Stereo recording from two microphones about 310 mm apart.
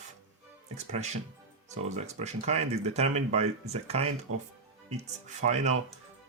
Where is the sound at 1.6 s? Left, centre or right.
Right.